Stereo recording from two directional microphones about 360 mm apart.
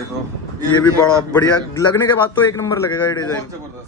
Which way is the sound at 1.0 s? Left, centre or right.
Centre.